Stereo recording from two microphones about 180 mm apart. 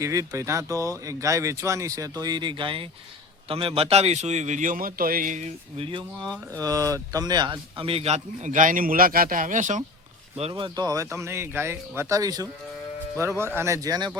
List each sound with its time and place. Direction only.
0.0 s speech: 15° right (ahead or behind)
6.2 s speech: 5° left (ahead or behind)
6.6 s speech: 20° right (ahead or behind); by 9.8 s 45° right (ahead or behind)
10.5 s speech: 25° right (ahead or behind)
13.6 s speech: 15° right (ahead or behind)